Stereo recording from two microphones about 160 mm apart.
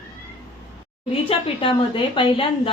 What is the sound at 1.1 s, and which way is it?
A woman's voice, 35° left (ahead or behind).